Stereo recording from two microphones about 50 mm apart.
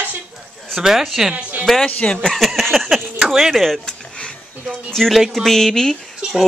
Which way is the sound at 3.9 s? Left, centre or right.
Centre.